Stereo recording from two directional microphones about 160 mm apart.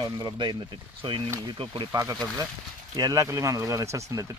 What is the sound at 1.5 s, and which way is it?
Speech, 25° right (ahead or behind).